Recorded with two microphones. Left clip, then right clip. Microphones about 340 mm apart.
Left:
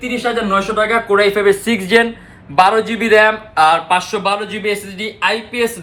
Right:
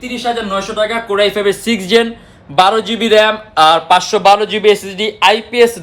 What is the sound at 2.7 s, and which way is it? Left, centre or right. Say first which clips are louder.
Speech: right 1 dB; right.